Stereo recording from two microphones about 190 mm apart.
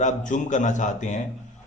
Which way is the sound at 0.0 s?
40° left (ahead or behind).